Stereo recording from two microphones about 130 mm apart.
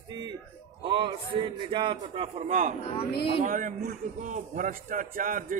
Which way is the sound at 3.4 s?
90° right.